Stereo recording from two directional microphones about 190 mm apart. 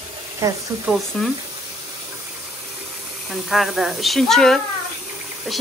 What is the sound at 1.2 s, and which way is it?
Speech, centre (ahead or behind).